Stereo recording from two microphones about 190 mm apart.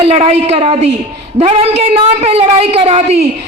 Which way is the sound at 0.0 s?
30° right (ahead or behind).